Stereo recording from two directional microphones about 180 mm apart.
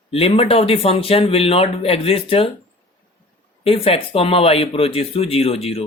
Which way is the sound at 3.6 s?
30° left (ahead or behind).